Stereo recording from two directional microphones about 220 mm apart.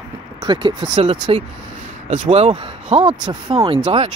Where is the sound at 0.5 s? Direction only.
20° right (ahead or behind).